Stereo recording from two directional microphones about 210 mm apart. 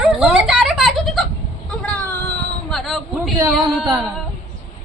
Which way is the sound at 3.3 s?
15° right (ahead or behind).